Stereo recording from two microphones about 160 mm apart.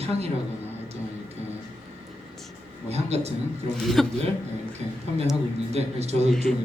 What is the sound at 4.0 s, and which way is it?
Speech, centre (ahead or behind).